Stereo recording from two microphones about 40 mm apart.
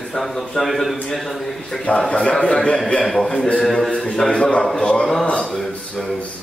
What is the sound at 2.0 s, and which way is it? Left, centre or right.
Speech, left.